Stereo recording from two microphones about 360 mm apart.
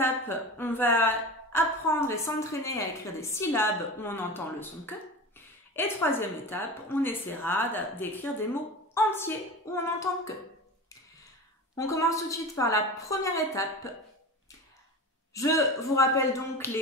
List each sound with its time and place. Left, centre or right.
0.0 s a woman's voice: centre
11.7 s a woman's voice: centre
15.3 s a woman's voice: centre